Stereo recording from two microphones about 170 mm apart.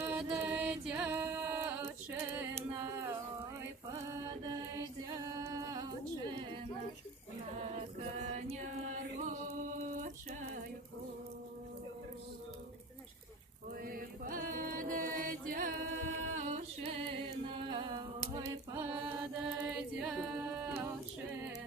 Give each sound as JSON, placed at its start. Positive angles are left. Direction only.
{"t": 0.0, "sound": "music", "side_deg": -10}
{"t": 4.1, "sound": "chant", "side_deg": -25}
{"t": 7.5, "sound": "chant", "side_deg": -40}
{"t": 13.8, "sound": "mantra", "side_deg": -55}
{"t": 16.8, "sound": "a sound", "side_deg": -30}
{"t": 18.7, "sound": "chant", "side_deg": -15}